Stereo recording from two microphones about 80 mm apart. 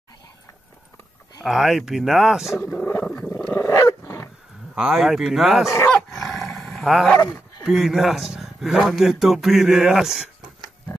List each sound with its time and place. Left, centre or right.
1.4 s a man's voice: centre
2.6 s speech: left
3.5 s dog: left
4.7 s a man's voice: centre
5.9 s dog: centre
7.6 s a man's voice: centre